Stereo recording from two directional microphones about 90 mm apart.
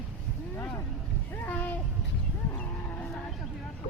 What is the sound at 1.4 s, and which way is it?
Speech, 20° left (ahead or behind).